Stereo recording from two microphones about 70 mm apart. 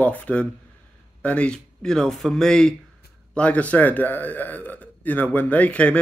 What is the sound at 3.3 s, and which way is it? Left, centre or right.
A man's voice, centre.